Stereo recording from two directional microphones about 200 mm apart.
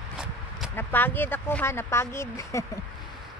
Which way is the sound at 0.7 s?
10° left (ahead or behind).